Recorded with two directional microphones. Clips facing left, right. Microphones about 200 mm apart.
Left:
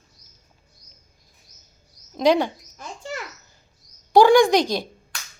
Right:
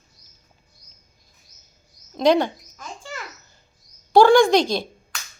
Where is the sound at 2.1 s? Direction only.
10° left (ahead or behind).